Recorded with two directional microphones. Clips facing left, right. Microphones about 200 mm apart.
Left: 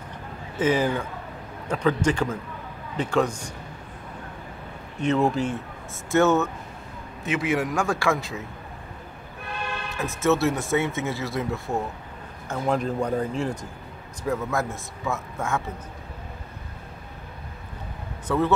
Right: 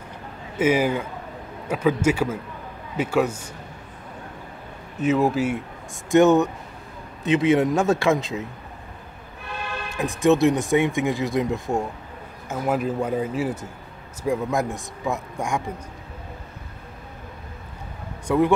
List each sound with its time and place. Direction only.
0.6 s speech: 10° right (ahead or behind)
5.0 s speech: 5° right (ahead or behind)
6.0 s a man's voice: 15° right (ahead or behind)
9.9 s speech: 15° right (ahead or behind)
18.2 s speech: 15° right (ahead or behind)